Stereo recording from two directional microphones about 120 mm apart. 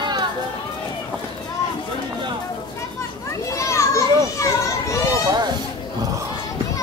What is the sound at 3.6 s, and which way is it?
Children playing, 25° left (ahead or behind).